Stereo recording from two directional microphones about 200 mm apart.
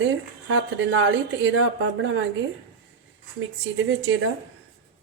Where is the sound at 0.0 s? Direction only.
65° right (ahead or behind).